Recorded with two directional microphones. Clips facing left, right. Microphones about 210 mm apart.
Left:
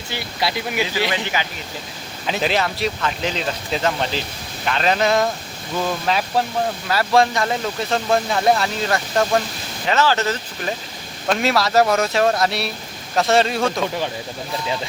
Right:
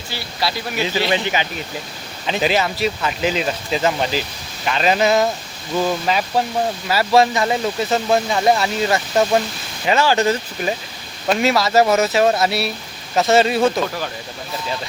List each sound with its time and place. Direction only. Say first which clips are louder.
0.1 s speech: even; 20° left (ahead or behind)
1.1 s speech: right 4 dB; 20° right (ahead or behind)
2.2 s speech: right 2 dB; centre (ahead or behind)
11.3 s speech: right 2 dB; centre (ahead or behind)